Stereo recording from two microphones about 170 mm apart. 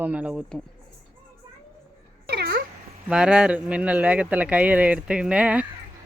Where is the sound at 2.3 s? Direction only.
70° right (ahead or behind).